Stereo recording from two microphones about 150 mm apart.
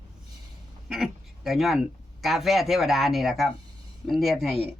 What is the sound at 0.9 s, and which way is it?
Speech, centre (ahead or behind).